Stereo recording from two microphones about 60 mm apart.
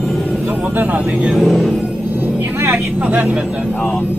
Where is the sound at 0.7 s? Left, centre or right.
Right.